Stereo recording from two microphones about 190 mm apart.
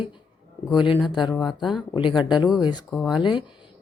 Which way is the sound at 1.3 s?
Centre (ahead or behind).